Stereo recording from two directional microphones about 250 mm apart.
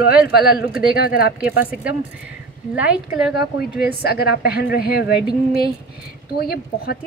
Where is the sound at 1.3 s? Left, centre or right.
Centre.